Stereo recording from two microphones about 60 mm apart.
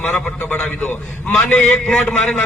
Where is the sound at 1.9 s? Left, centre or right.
Centre.